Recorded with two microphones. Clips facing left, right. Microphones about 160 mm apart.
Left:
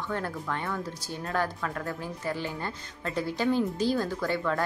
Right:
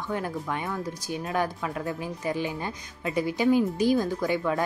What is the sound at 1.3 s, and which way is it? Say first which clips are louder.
A woman's voice: right 1 dB; 15° right (ahead or behind).